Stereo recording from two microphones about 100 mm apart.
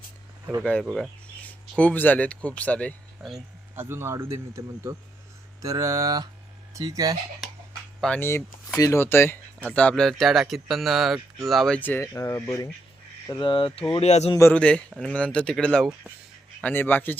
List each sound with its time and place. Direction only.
0.6 s speech: 10° left (ahead or behind)
3.2 s speech: 5° right (ahead or behind)
3.8 s speech: 25° right (ahead or behind)
8.2 s speech: 25° left (ahead or behind); by 11.8 s 5° left (ahead or behind)
11.8 s speech: 20° left (ahead or behind)
13.4 s speech: 55° left (ahead or behind); by 14.3 s 90° left
14.5 s speech: 10° left (ahead or behind)
16.7 s speech: 20° left (ahead or behind)